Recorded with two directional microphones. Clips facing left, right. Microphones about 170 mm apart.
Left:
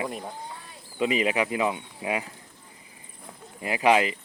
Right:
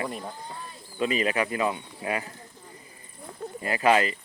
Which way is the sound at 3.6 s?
15° left (ahead or behind).